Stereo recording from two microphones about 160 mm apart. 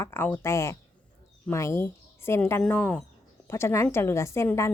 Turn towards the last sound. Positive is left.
turn(degrees=15)  # may be behind; listen again after turning